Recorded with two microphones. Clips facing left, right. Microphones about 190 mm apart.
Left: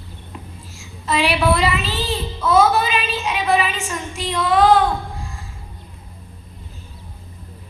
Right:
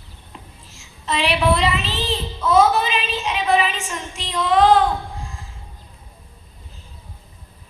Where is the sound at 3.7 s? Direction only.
15° right (ahead or behind).